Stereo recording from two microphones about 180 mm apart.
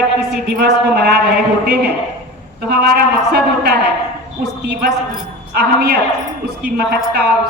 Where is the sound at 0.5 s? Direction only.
65° right (ahead or behind).